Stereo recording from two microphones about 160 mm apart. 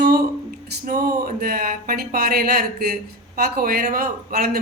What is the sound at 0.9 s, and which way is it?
A man's voice, 70° right (ahead or behind).